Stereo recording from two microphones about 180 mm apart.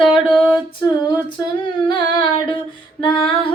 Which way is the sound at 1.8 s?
25° left (ahead or behind).